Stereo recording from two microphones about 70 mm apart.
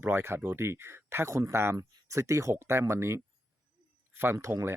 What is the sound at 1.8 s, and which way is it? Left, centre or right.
Speech, right.